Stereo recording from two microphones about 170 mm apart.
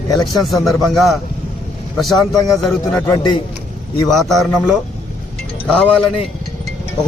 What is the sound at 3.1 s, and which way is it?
Speech, 25° left (ahead or behind).